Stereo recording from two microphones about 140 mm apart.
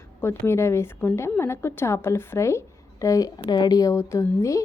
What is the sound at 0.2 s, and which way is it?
A woman's voice, 20° left (ahead or behind).